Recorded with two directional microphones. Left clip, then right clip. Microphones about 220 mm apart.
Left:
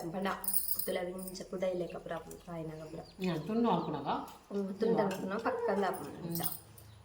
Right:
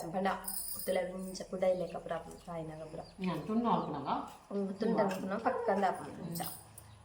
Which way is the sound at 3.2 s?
55° left (ahead or behind).